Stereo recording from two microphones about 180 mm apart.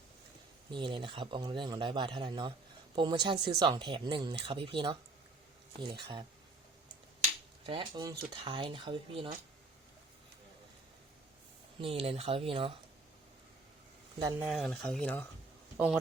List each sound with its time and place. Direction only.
0.7 s speech: 25° right (ahead or behind)
7.7 s speech: 25° right (ahead or behind)
11.8 s speech: 30° right (ahead or behind)
14.2 s speech: 20° right (ahead or behind)
14.4 s speech: centre (ahead or behind)